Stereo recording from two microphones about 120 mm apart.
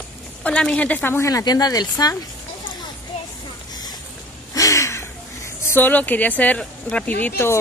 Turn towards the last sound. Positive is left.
turn(degrees=15)  # may be behind; listen again after turning